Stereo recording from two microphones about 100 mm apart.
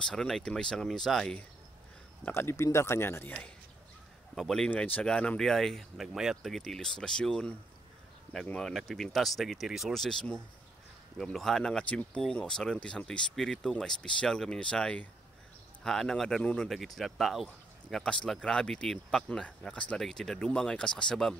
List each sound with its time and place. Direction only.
0.0 s speech: 5° left (ahead or behind)
2.3 s a man's voice: 25° left (ahead or behind)
4.4 s speech: 5° left (ahead or behind)
4.6 s speech: 15° left (ahead or behind)